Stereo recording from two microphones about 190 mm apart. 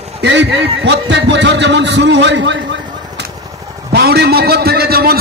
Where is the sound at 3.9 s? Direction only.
60° right (ahead or behind).